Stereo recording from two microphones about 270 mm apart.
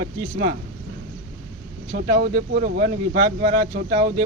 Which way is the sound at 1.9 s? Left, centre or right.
Right.